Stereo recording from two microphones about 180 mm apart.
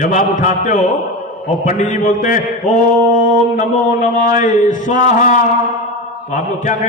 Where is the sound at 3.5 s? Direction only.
45° left (ahead or behind).